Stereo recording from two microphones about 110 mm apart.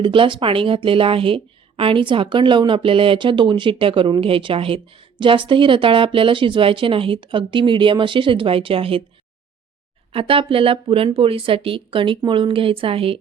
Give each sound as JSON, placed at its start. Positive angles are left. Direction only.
{"t": 0.0, "sound": "a woman's voice", "side_deg": -50}
{"t": 10.1, "sound": "speech", "side_deg": -55}